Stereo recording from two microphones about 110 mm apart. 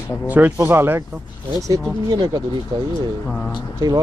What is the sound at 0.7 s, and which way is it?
Speech, 20° right (ahead or behind).